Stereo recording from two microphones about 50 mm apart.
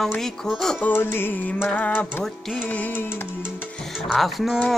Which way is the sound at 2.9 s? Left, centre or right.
Left.